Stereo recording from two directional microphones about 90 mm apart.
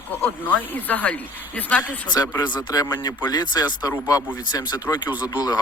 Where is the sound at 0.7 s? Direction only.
20° left (ahead or behind).